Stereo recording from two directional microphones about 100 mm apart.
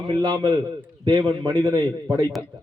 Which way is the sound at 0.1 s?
45° right (ahead or behind).